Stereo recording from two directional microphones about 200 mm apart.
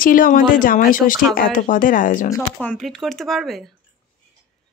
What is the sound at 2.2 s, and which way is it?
A woman's voice, 10° left (ahead or behind).